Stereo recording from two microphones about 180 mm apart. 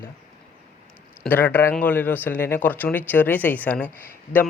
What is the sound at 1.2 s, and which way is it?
Speech, 10° left (ahead or behind).